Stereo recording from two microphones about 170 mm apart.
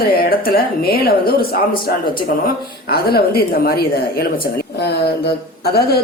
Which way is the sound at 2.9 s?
65° left (ahead or behind).